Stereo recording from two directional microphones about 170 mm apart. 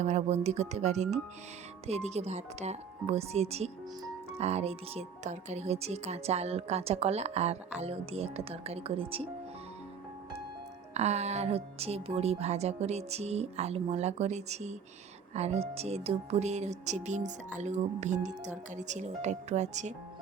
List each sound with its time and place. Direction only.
0.0 s speech: 40° right (ahead or behind)
10.9 s speech: 40° right (ahead or behind)